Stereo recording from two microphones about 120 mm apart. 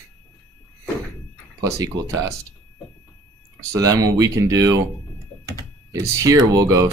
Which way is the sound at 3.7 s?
30° right (ahead or behind).